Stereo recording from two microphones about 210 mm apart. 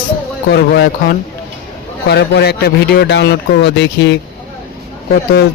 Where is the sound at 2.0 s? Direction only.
50° left (ahead or behind).